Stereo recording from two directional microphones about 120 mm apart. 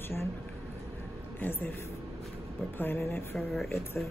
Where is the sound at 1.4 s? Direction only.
20° left (ahead or behind).